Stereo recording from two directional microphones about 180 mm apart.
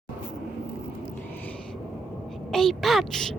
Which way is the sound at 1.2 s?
10° left (ahead or behind).